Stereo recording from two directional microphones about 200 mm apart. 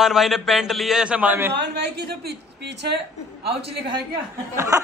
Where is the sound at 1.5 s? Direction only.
55° right (ahead or behind).